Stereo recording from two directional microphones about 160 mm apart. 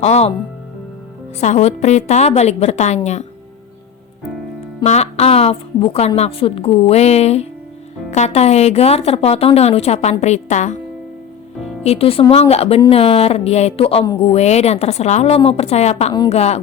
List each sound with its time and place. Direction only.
0.0 s a woman's voice: 40° left (ahead or behind)
1.4 s a woman's voice: 45° left (ahead or behind)
4.8 s a woman's voice: 45° left (ahead or behind)
11.8 s a woman's voice: 40° left (ahead or behind)